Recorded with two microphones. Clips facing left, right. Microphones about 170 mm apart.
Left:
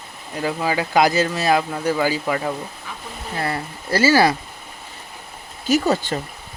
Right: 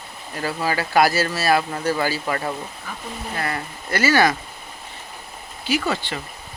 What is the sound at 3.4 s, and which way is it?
Speech, 25° left (ahead or behind).